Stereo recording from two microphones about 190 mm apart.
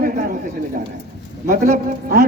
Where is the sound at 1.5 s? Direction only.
50° right (ahead or behind).